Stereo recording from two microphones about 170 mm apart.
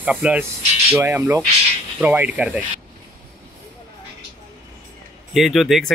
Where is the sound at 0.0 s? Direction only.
5° right (ahead or behind).